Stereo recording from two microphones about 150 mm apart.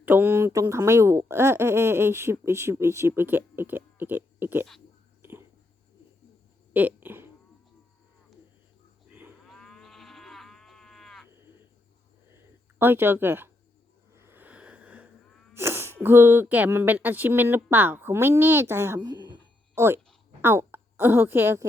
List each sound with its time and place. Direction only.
0.0 s speech: 15° right (ahead or behind)
6.7 s fart: 10° right (ahead or behind)
9.5 s livestock: 5° left (ahead or behind)
12.8 s speech: 15° right (ahead or behind)
14.1 s a sound: 15° right (ahead or behind)
15.5 s sneeze: 15° right (ahead or behind)
16.0 s a woman's voice: 15° right (ahead or behind)